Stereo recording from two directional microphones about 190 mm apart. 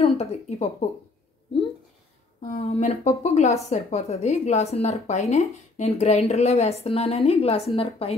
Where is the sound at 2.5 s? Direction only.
35° left (ahead or behind).